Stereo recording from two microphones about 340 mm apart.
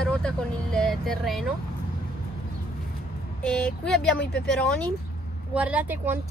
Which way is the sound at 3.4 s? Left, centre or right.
Centre.